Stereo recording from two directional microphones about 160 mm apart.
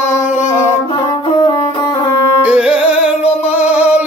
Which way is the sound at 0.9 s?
30° left (ahead or behind).